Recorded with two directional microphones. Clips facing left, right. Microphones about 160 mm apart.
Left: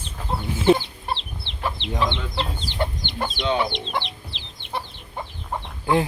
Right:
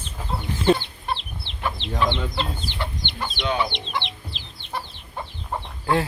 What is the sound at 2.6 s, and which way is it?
Chicken, 40° left (ahead or behind).